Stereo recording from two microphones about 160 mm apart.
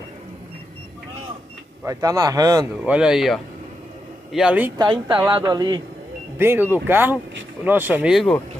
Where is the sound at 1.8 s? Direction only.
20° right (ahead or behind).